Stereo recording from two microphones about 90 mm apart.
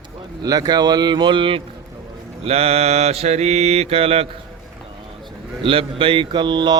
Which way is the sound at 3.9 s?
90° right.